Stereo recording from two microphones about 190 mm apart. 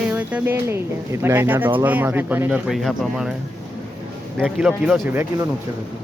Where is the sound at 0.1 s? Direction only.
10° right (ahead or behind).